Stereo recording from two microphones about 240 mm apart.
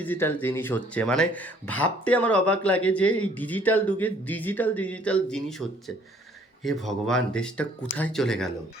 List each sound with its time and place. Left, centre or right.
0.0 s speech: centre